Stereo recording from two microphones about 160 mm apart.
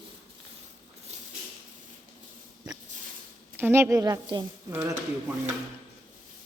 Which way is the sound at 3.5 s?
15° right (ahead or behind).